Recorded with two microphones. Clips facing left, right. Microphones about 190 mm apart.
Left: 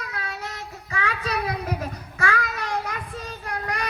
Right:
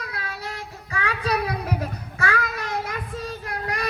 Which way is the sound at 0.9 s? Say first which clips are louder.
Right 3 dB; 35° right (ahead or behind).